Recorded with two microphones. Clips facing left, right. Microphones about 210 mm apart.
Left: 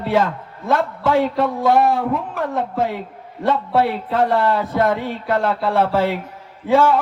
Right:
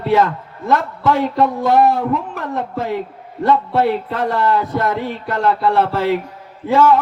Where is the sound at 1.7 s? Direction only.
50° left (ahead or behind).